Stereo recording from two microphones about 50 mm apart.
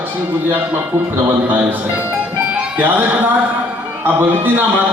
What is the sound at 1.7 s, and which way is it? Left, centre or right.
Music, right.